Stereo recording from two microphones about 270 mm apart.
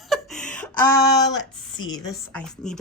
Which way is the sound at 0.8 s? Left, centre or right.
Left.